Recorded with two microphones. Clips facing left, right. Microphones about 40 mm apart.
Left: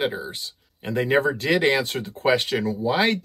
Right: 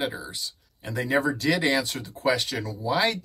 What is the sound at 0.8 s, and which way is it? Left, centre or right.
Speech, left.